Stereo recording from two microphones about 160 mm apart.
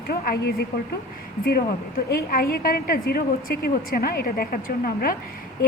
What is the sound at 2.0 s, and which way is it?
A woman's voice, 70° left (ahead or behind).